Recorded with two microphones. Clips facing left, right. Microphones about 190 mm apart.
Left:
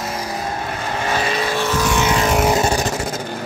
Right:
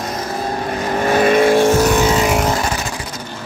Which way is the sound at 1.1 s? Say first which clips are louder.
Right 11 dB; 55° right (ahead or behind).